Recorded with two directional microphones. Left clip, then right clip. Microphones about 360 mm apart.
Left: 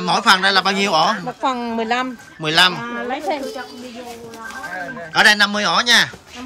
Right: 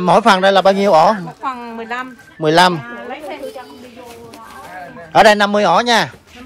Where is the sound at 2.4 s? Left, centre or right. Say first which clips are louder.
Right 4 dB; centre.